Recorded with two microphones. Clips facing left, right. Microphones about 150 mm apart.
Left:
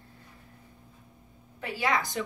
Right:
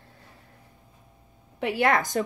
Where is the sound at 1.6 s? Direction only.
60° right (ahead or behind).